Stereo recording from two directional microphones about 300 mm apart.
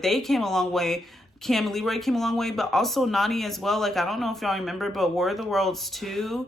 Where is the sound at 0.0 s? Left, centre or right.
Centre.